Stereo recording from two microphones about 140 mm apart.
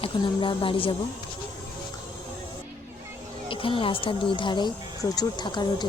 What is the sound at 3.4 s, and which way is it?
Speech, 40° left (ahead or behind).